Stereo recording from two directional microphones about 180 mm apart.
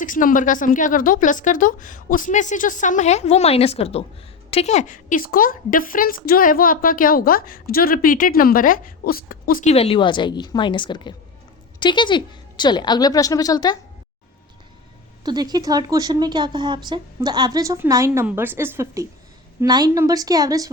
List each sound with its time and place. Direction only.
0.0 s a woman's voice: 50° left (ahead or behind)
9.6 s speech: 35° left (ahead or behind)
15.2 s speech: 20° right (ahead or behind)